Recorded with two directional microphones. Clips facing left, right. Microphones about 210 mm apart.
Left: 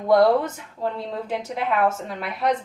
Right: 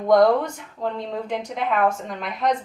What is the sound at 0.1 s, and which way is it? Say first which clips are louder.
A woman's voice: right 1 dB; 5° left (ahead or behind).